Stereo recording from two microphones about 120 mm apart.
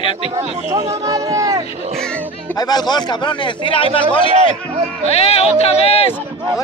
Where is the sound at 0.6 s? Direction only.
25° right (ahead or behind).